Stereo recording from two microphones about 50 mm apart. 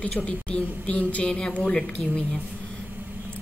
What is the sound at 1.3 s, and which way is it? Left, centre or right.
Speech, centre.